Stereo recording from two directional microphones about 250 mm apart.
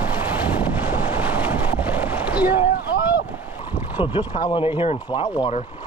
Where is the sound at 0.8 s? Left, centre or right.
Centre.